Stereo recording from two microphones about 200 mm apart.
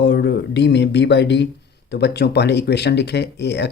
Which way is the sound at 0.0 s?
60° left (ahead or behind).